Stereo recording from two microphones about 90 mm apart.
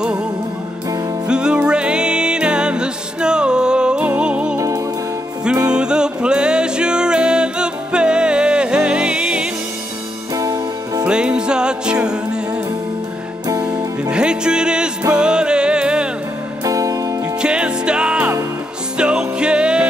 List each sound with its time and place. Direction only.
1.2 s music: 10° right (ahead or behind)
4.6 s music: 35° right (ahead or behind)
5.7 s music: 10° right (ahead or behind)
10.3 s music: 40° right (ahead or behind)
11.1 s music: 10° right (ahead or behind)
14.1 s music: 10° right (ahead or behind)
16.6 s music: 40° right (ahead or behind)
17.4 s music: 10° right (ahead or behind)